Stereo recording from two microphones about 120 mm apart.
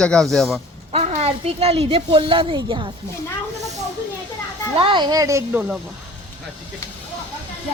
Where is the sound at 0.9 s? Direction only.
60° right (ahead or behind); by 2.9 s 45° right (ahead or behind).